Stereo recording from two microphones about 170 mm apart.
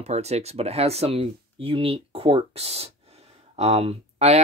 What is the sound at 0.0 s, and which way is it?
Speech, 40° right (ahead or behind).